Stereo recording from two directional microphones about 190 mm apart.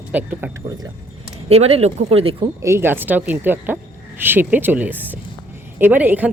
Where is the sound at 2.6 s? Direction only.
15° right (ahead or behind).